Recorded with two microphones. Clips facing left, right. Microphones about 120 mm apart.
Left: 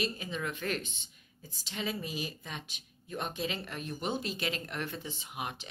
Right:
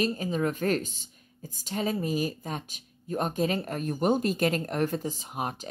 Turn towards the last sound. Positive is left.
turn(degrees=-40)  # may be behind; listen again after turning